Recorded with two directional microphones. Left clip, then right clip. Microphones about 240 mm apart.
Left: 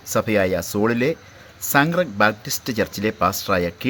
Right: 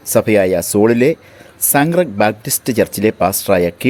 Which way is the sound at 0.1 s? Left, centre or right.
Right.